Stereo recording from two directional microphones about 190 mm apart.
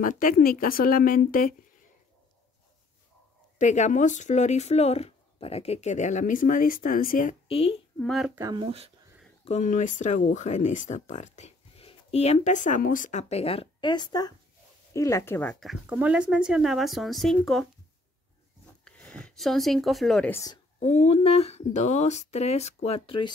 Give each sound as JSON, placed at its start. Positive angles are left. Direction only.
{"t": 0.0, "sound": "speech", "side_deg": 45}
{"t": 3.5, "sound": "speech", "side_deg": 40}
{"t": 7.4, "sound": "a woman's voice", "side_deg": 30}
{"t": 8.0, "sound": "speech", "side_deg": 0}
{"t": 8.4, "sound": "speech", "side_deg": -20}
{"t": 8.6, "sound": "speech", "side_deg": -30}
{"t": 9.4, "sound": "speech", "side_deg": 35}
{"t": 15.6, "sound": "speech", "side_deg": -5}
{"t": 18.9, "sound": "speech", "side_deg": 5}
{"t": 20.8, "sound": "speech", "side_deg": 35}